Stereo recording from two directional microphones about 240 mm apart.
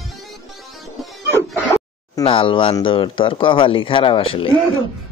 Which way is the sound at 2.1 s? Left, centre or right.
Left.